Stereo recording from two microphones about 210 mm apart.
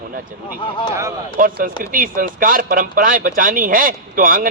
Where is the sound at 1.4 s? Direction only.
40° right (ahead or behind).